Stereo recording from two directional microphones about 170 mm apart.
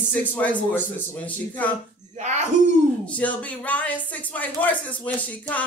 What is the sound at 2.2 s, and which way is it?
Speech, 45° right (ahead or behind).